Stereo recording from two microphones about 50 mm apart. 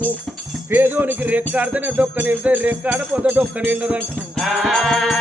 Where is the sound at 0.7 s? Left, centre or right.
Right.